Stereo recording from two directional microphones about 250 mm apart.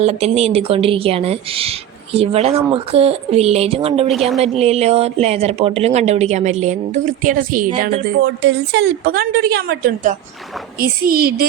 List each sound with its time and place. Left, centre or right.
0.0 s a woman's voice: right
4.1 s a woman's voice: centre
4.4 s a woman's voice: right
8.2 s a woman's voice: right